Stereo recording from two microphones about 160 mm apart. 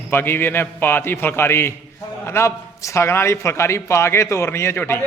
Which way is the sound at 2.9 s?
15° left (ahead or behind).